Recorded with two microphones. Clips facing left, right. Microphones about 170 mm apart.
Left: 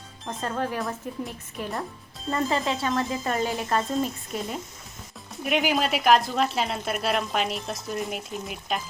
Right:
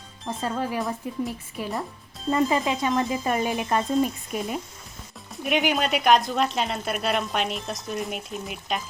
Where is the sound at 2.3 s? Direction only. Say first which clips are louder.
Right 3 dB; 15° right (ahead or behind).